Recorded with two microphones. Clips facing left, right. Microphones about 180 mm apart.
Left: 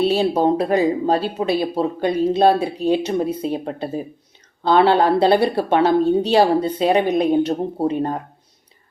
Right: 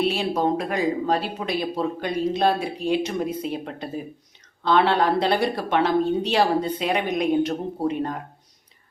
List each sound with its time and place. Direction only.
0.0 s speech: 30° left (ahead or behind)